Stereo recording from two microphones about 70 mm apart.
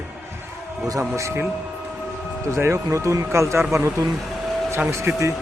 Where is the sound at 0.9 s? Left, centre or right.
Right.